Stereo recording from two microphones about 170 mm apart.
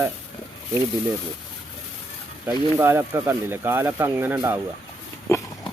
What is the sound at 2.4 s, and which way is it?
Speech, 15° right (ahead or behind).